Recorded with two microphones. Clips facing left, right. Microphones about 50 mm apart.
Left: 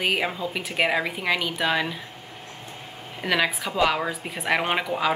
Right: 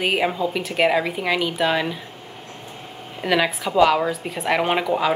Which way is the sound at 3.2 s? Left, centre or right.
Centre.